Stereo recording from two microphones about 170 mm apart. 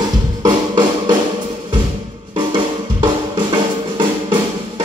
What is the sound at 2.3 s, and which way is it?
Drum, 25° right (ahead or behind).